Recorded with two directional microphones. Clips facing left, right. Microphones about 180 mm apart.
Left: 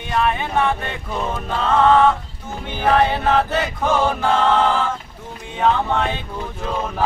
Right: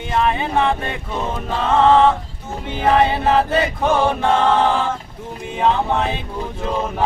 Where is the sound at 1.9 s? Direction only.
25° right (ahead or behind).